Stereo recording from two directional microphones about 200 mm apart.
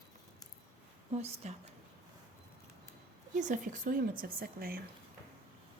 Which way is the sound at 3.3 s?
40° right (ahead or behind).